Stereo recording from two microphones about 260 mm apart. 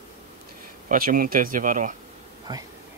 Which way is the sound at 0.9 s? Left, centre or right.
Right.